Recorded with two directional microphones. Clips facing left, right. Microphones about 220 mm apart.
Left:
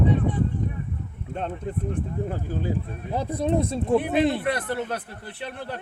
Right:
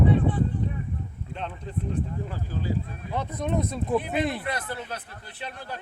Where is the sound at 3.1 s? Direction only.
35° left (ahead or behind).